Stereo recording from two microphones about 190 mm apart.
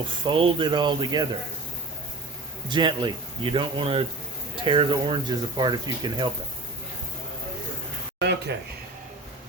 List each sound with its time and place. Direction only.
0.3 s speech: 25° right (ahead or behind)
2.6 s speech: 25° right (ahead or behind)
8.2 s a sound: 65° right (ahead or behind)